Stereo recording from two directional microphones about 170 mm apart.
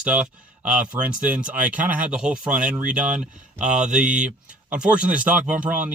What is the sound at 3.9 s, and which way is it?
Speech, 5° right (ahead or behind).